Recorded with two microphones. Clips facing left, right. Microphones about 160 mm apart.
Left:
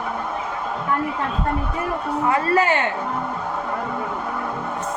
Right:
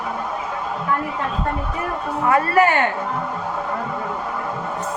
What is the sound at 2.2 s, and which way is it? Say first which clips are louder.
Speech: right 3 dB; 25° left (ahead or behind).